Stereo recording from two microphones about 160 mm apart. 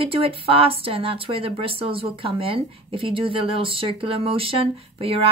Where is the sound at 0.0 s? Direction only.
35° right (ahead or behind).